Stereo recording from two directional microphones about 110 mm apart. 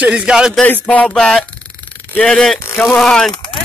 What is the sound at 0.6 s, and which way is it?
Speech, 15° left (ahead or behind).